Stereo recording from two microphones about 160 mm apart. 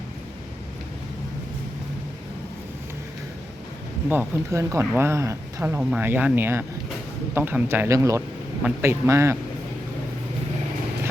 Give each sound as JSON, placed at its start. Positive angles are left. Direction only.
{"t": 4.1, "sound": "speech", "side_deg": -15}